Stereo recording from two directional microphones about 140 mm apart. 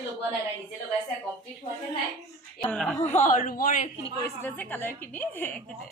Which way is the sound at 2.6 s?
5° left (ahead or behind).